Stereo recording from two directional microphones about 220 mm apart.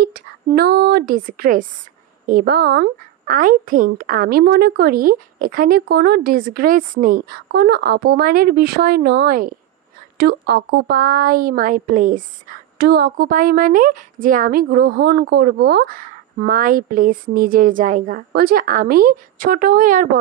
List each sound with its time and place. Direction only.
0.0 s a woman's voice: 45° right (ahead or behind)